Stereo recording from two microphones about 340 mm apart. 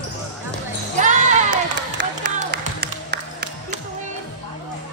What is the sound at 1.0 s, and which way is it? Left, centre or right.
Music, right.